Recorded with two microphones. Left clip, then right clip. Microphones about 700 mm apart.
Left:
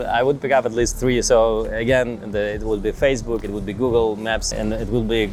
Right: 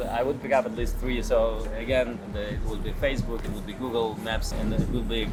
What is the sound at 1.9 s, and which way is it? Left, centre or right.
Speech, left.